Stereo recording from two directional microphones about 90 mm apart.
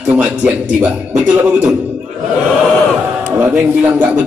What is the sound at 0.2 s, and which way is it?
A man's voice, 15° right (ahead or behind).